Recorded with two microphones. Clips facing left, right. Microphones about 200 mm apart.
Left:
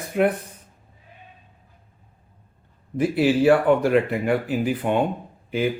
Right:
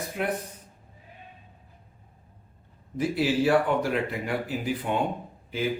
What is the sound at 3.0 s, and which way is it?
Speech, 55° left (ahead or behind).